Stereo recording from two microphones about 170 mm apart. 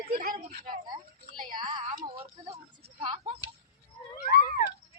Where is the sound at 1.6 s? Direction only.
30° right (ahead or behind).